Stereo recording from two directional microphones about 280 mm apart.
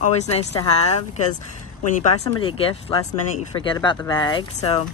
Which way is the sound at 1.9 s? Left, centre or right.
Left.